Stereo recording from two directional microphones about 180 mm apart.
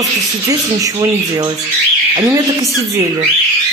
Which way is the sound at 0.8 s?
20° right (ahead or behind).